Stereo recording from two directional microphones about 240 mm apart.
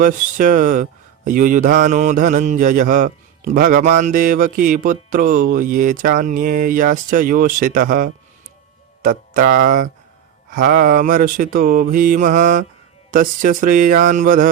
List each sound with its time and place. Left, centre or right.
0.0 s speech: right